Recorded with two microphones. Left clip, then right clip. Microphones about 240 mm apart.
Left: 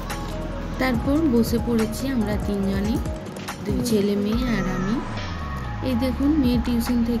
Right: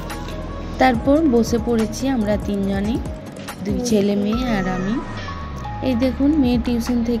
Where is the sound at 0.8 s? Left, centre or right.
Right.